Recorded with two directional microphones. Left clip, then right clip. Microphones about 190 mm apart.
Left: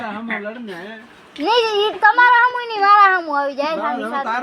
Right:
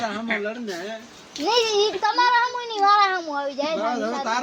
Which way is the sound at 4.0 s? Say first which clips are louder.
Left 3 dB; 30° left (ahead or behind).